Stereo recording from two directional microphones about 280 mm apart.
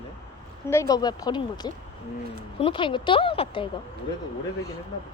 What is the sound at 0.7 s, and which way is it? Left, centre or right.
A woman's voice, centre.